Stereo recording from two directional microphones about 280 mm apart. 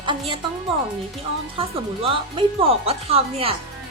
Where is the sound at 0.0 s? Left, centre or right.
Centre.